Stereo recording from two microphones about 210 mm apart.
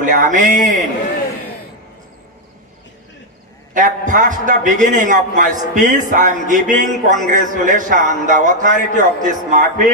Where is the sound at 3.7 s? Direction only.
35° right (ahead or behind).